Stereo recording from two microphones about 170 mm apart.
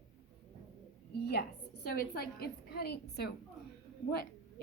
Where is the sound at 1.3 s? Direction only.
70° left (ahead or behind).